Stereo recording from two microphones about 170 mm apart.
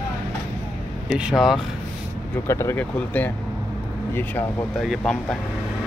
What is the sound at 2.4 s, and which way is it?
Speech, 15° left (ahead or behind).